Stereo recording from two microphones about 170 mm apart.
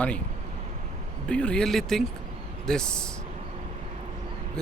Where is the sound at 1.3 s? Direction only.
5° left (ahead or behind).